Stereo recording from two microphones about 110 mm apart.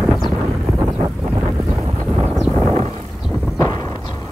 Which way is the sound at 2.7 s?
70° right (ahead or behind).